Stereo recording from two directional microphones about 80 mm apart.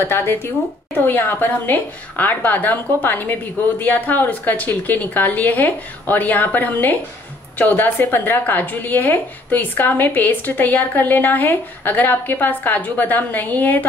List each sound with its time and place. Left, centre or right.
0.0 s a woman's voice: left